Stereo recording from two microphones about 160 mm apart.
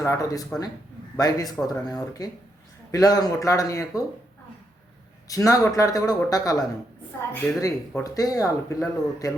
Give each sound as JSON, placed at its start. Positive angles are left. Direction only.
{"t": 0.0, "sound": "speech", "side_deg": 20}
{"t": 5.3, "sound": "speech", "side_deg": 20}